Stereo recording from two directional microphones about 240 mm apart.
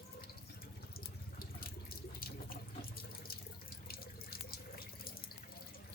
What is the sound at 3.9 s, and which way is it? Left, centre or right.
Water tap, left.